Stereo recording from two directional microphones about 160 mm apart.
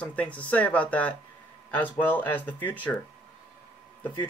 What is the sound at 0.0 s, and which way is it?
Speech, 10° left (ahead or behind).